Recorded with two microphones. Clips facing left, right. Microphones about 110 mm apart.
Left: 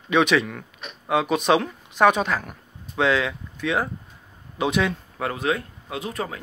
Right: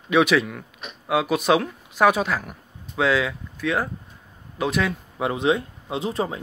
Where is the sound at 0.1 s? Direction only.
5° right (ahead or behind).